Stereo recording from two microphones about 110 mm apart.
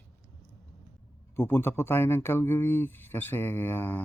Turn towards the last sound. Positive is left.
turn(degrees=15)  # may be behind; listen again after turning